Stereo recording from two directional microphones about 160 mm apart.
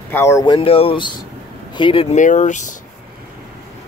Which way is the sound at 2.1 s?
50° left (ahead or behind).